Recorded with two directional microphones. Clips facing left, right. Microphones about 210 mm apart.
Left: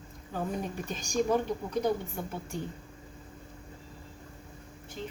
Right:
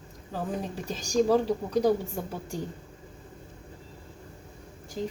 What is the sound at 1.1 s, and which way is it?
Speech, 35° right (ahead or behind).